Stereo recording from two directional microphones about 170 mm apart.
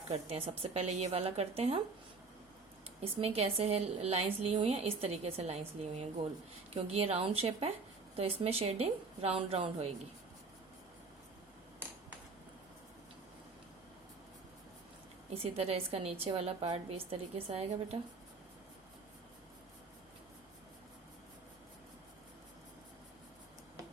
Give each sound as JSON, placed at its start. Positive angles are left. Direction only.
{"t": 0.1, "sound": "a woman's voice", "side_deg": -35}
{"t": 3.0, "sound": "a woman's voice", "side_deg": -35}
{"t": 15.3, "sound": "a woman's voice", "side_deg": -35}